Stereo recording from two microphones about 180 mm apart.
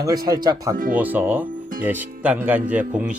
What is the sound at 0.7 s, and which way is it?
Speech, 50° right (ahead or behind).